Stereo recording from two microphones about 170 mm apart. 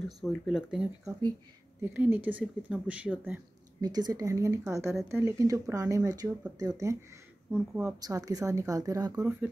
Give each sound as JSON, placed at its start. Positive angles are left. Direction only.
{"t": 0.2, "sound": "speech", "side_deg": 0}
{"t": 3.8, "sound": "speech", "side_deg": -25}
{"t": 7.5, "sound": "speech", "side_deg": -10}
{"t": 8.0, "sound": "speech", "side_deg": -20}